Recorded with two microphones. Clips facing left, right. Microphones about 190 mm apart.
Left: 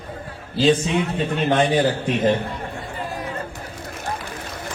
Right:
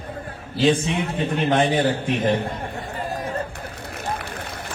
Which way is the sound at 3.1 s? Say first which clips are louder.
Right 3 dB; 45° right (ahead or behind).